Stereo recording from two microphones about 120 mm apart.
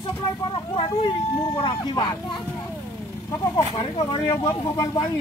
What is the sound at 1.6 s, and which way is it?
Speech, 40° left (ahead or behind).